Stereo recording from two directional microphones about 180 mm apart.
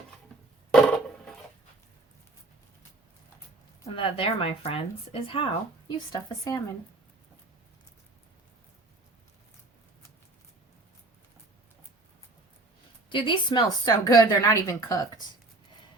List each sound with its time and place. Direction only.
0.7 s a sound: 5° left (ahead or behind)
3.8 s a woman's voice: 30° left (ahead or behind)
13.1 s a woman's voice: 25° left (ahead or behind)